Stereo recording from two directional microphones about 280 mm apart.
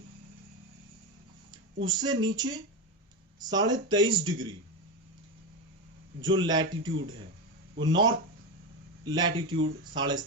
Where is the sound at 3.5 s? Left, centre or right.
Centre.